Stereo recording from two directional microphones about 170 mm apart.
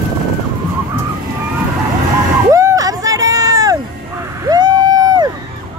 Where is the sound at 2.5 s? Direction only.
20° right (ahead or behind).